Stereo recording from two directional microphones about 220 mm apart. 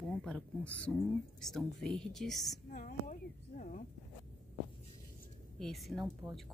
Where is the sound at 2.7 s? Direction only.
35° left (ahead or behind).